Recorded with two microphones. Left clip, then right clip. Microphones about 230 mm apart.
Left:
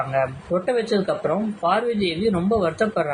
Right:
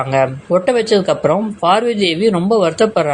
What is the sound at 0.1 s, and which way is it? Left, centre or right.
A man's voice, right.